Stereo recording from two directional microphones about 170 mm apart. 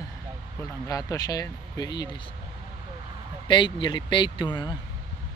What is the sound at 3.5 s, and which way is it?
Speech, 30° left (ahead or behind).